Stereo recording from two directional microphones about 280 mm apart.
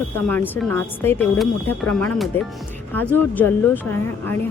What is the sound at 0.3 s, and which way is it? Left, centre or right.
Speech, centre.